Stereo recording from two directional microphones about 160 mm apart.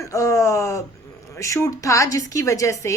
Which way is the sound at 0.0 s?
20° left (ahead or behind).